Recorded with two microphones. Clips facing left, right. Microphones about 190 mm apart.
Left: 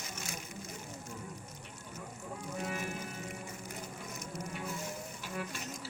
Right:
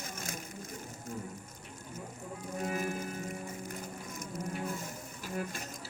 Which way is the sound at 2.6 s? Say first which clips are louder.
Right 5 dB; 45° right (ahead or behind).